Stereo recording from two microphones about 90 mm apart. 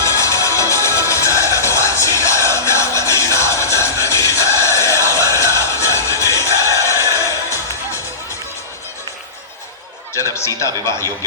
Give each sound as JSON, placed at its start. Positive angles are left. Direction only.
{"t": 0.0, "sound": "music", "side_deg": 35}
{"t": 10.3, "sound": "speech", "side_deg": 30}